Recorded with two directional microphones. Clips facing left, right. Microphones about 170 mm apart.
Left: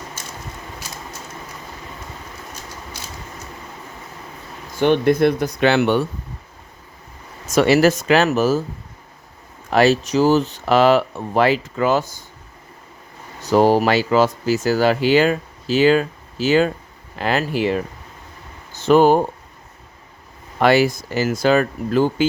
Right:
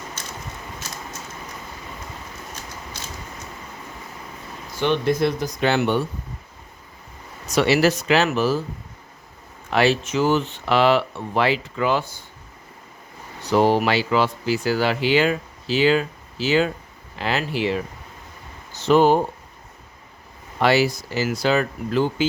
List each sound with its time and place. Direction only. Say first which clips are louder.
4.8 s speech: left 5 dB; 55° left (ahead or behind); by 6.0 s 80° left
7.4 s speech: left 4 dB; 45° left (ahead or behind)
9.6 s speech: left 4 dB; 40° left (ahead or behind)
13.4 s speech: left 3 dB; 40° left (ahead or behind)
18.9 s speech: left 3 dB; 50° left (ahead or behind)
20.6 s speech: left 3 dB; 50° left (ahead or behind)